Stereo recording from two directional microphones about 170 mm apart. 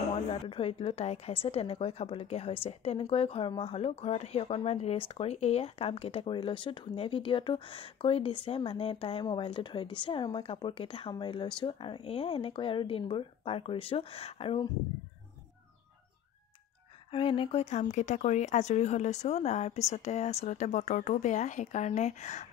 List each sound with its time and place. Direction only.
0.5 s speech: 35° left (ahead or behind)
17.1 s speech: 30° left (ahead or behind)